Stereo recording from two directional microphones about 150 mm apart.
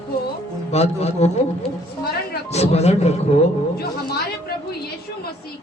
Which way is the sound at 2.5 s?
45° left (ahead or behind).